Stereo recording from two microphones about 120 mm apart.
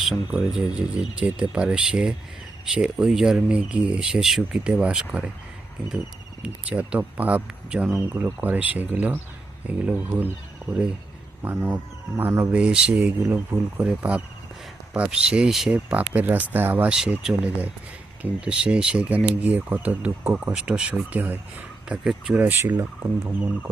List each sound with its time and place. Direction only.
0.0 s speech: 10° right (ahead or behind)
6.4 s speech: 10° right (ahead or behind)
12.5 s speech: 10° right (ahead or behind)
16.9 s speech: 5° right (ahead or behind)